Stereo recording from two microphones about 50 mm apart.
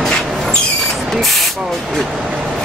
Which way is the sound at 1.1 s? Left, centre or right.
Centre.